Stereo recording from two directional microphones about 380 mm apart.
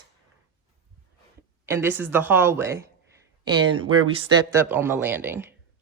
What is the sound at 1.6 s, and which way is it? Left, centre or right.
Speech, centre.